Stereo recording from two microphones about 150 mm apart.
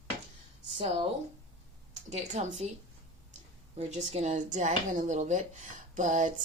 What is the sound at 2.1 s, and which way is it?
Speech, 50° right (ahead or behind).